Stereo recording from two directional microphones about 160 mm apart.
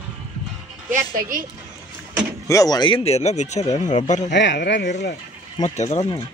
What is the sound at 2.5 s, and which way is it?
Speech, 20° left (ahead or behind).